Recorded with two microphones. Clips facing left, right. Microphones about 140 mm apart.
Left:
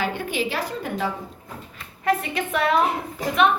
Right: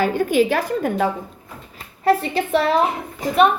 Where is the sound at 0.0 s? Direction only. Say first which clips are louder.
Right 8 dB; 45° right (ahead or behind).